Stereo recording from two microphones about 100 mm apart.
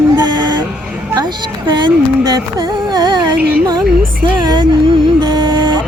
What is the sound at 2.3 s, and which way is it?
Music, 40° right (ahead or behind).